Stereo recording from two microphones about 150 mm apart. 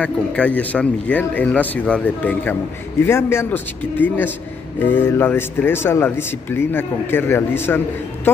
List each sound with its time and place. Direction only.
0.0 s speech: 10° left (ahead or behind)